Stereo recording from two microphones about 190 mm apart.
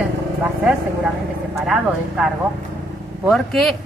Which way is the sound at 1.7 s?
Centre (ahead or behind).